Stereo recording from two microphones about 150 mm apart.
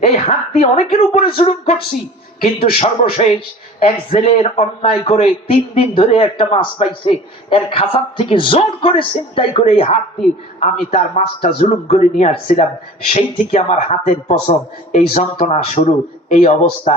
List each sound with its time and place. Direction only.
0.0 s a man's voice: 45° left (ahead or behind)